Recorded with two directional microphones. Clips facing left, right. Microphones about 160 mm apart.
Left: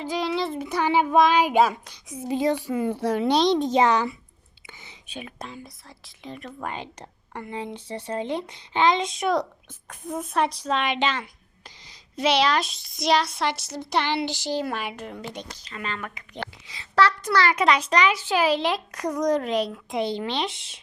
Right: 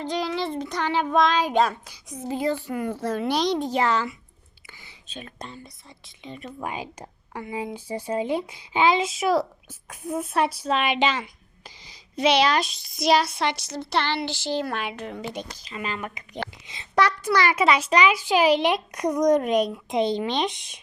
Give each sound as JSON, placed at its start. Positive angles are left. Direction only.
{"t": 0.0, "sound": "child singing", "side_deg": 0}
{"t": 3.3, "sound": "a child's voice", "side_deg": 25}
{"t": 11.9, "sound": "speech", "side_deg": 0}
{"t": 14.3, "sound": "child singing", "side_deg": 15}
{"t": 15.2, "sound": "a child's voice", "side_deg": -5}
{"t": 16.0, "sound": "a child's voice", "side_deg": -20}